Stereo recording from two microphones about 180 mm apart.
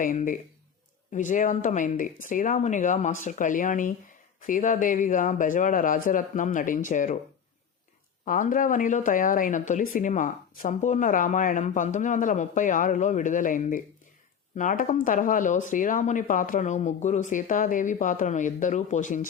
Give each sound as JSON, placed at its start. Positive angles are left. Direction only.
{"t": 0.0, "sound": "speech", "side_deg": 45}
{"t": 8.2, "sound": "speech", "side_deg": 45}